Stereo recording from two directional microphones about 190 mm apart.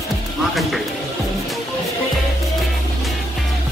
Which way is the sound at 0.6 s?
Centre (ahead or behind).